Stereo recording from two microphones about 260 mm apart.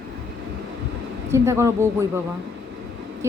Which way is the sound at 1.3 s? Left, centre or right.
Centre.